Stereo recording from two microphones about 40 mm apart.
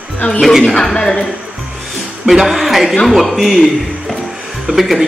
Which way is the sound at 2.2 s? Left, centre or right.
Centre.